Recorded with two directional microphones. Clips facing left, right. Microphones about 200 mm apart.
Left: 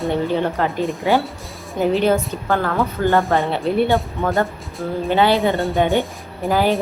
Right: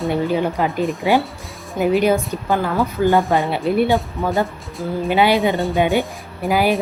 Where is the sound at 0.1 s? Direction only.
10° right (ahead or behind).